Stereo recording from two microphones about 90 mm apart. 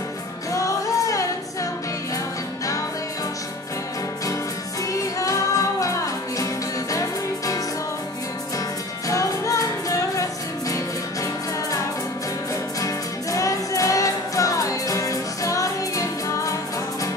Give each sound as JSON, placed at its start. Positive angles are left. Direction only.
{"t": 0.5, "sound": "music", "side_deg": 40}
{"t": 4.9, "sound": "music", "side_deg": 40}
{"t": 12.8, "sound": "music", "side_deg": 35}